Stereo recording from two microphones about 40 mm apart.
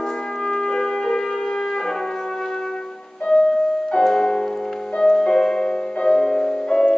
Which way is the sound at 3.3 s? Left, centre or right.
Centre.